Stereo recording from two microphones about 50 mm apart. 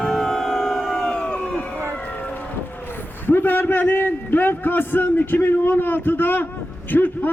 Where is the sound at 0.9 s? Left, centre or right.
Centre.